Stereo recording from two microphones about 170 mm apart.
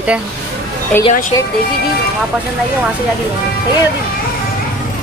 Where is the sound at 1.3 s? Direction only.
20° left (ahead or behind).